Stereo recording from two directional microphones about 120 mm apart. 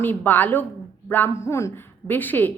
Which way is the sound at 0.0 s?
15° left (ahead or behind).